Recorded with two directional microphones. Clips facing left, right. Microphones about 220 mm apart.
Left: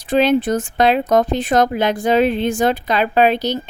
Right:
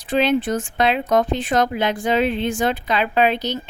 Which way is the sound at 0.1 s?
40° left (ahead or behind).